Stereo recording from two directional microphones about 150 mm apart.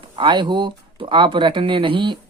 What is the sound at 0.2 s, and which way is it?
Speech, 30° right (ahead or behind).